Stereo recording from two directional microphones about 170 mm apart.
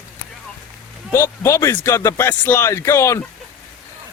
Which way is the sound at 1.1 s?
15° left (ahead or behind).